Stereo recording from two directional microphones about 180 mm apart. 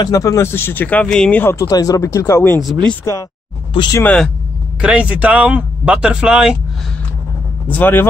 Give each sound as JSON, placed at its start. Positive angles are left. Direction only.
{"t": 0.0, "sound": "speech", "side_deg": 20}
{"t": 4.0, "sound": "speech", "side_deg": 5}
{"t": 4.8, "sound": "speech", "side_deg": -5}
{"t": 7.7, "sound": "speech", "side_deg": 10}